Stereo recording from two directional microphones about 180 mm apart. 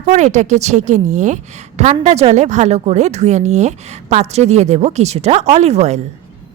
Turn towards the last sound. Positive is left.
turn(degrees=-40)  # may be behind; listen again after turning